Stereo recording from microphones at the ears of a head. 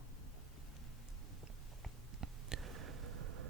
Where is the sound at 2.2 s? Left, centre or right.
Right.